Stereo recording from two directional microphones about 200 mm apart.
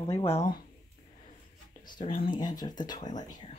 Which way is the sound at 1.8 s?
25° left (ahead or behind).